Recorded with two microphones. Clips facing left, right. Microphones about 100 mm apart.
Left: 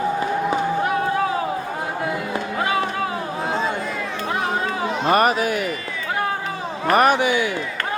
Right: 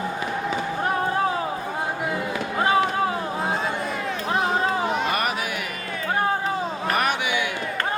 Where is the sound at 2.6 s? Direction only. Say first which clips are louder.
Right 3 dB; 30° right (ahead or behind).